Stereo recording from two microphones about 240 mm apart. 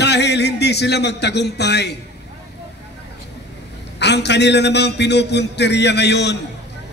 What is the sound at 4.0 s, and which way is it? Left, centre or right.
A man's voice, left.